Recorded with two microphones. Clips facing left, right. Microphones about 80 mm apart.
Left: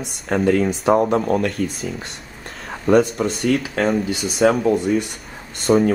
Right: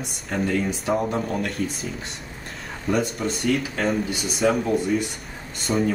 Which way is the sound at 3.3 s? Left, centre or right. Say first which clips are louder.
Left 4 dB; centre.